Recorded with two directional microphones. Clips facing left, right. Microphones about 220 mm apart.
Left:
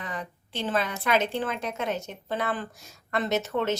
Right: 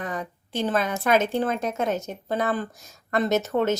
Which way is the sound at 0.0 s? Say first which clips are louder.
Right 5 dB; 45° right (ahead or behind).